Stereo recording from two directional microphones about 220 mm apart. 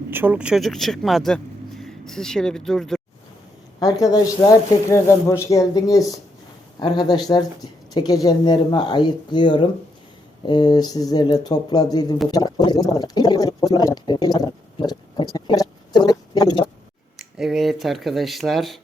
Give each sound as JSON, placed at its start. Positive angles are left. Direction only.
{"t": 0.1, "sound": "speech", "side_deg": -10}
{"t": 3.8, "sound": "speech", "side_deg": 15}
{"t": 17.2, "sound": "speech", "side_deg": 0}